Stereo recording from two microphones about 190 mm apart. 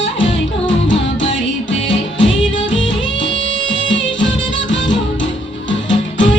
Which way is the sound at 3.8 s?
80° left.